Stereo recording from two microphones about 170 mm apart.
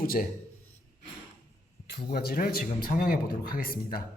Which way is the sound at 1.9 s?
70° left (ahead or behind).